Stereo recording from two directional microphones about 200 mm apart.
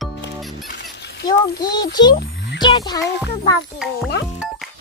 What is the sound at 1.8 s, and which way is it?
Speech, 20° left (ahead or behind).